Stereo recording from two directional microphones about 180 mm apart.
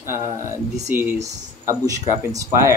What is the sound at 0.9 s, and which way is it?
Speech, 10° right (ahead or behind).